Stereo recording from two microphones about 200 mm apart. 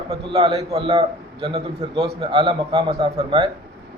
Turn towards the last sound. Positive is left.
turn(degrees=-20)  # may be behind; listen again after turning